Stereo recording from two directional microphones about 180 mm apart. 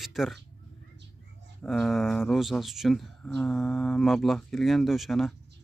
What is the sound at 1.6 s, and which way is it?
Speech, centre (ahead or behind).